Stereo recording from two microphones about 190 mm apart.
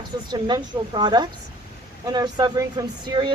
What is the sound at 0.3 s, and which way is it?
Speech, 25° right (ahead or behind).